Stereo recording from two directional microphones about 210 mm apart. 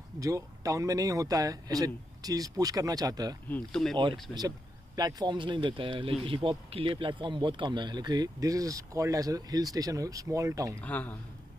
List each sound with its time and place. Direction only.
0.2 s speech: 15° right (ahead or behind)
3.4 s speech: 5° left (ahead or behind)
4.3 s speech: 20° right (ahead or behind)
10.8 s a man's voice: 5° left (ahead or behind)